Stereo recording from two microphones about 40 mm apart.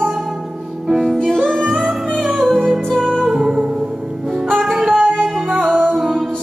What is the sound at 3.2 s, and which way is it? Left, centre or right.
Music, right.